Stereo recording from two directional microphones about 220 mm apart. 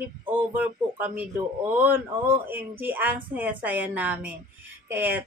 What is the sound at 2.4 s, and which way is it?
Speech, 10° right (ahead or behind).